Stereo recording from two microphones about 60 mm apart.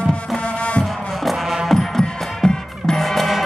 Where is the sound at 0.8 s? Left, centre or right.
Centre.